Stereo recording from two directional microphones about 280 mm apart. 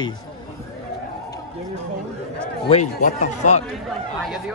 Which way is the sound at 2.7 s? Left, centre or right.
Left.